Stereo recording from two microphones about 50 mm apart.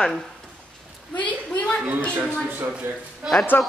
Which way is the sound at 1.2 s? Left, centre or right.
Left.